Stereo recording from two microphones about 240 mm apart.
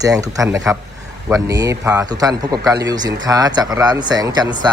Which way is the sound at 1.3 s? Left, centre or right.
Centre.